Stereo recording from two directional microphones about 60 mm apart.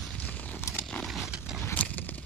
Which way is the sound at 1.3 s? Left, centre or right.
Centre.